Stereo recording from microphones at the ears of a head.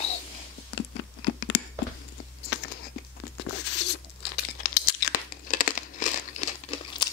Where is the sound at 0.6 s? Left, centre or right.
Left.